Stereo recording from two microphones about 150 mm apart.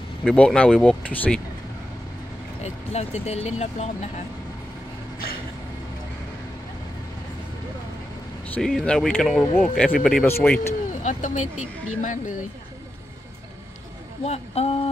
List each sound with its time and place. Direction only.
0.3 s speech: 5° left (ahead or behind)
2.6 s speech: 45° left (ahead or behind)
8.5 s speech: 5° left (ahead or behind)
9.9 s speech: centre (ahead or behind)
10.2 s speech: 15° left (ahead or behind)
10.9 s speech: 55° left (ahead or behind)
14.2 s speech: 45° left (ahead or behind)